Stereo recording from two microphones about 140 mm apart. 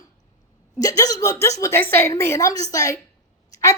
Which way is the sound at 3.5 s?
20° left (ahead or behind).